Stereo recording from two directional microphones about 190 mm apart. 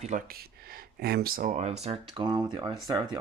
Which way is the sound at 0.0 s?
40° right (ahead or behind).